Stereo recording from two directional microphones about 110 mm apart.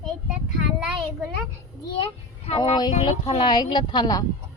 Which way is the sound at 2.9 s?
75° left (ahead or behind).